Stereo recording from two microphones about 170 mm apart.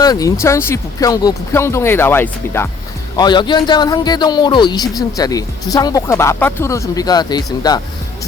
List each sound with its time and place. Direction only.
0.0 s speech: 20° left (ahead or behind)
3.2 s a man's voice: 25° left (ahead or behind)